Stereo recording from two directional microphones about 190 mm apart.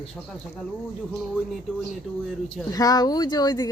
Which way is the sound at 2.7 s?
20° left (ahead or behind).